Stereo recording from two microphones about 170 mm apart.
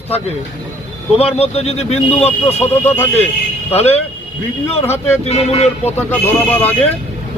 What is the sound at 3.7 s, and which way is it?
Speech, 35° left (ahead or behind).